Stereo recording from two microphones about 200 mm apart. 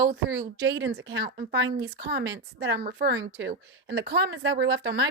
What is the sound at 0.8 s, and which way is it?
A woman's voice, 70° right (ahead or behind).